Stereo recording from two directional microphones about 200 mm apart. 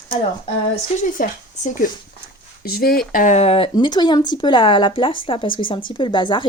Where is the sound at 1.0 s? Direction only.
40° left (ahead or behind).